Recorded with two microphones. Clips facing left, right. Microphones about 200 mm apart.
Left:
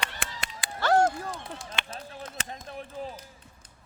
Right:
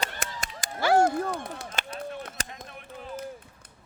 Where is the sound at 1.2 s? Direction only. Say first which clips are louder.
Right 7 dB; 55° right (ahead or behind).